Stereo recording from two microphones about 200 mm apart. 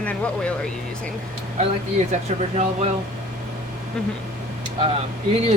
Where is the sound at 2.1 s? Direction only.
35° right (ahead or behind).